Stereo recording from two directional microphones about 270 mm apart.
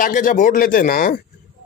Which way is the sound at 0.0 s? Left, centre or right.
Left.